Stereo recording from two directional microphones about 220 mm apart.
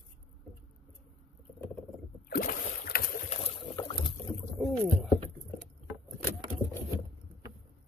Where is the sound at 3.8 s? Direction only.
20° left (ahead or behind).